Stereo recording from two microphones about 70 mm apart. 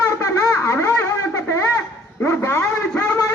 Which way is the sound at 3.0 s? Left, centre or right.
Left.